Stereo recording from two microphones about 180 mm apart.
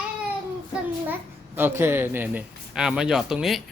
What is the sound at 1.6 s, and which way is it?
A child's voice, 10° right (ahead or behind).